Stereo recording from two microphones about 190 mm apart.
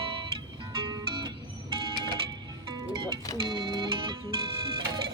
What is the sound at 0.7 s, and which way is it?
Music, 20° right (ahead or behind).